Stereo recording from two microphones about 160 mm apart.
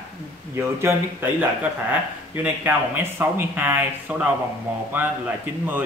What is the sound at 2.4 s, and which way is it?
Speech, 15° right (ahead or behind).